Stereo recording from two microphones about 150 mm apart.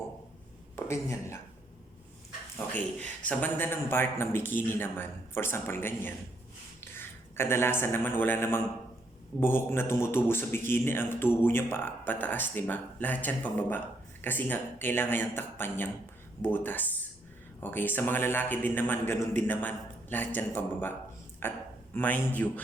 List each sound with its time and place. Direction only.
0.9 s speech: 20° left (ahead or behind)
2.7 s a man's voice: 10° left (ahead or behind)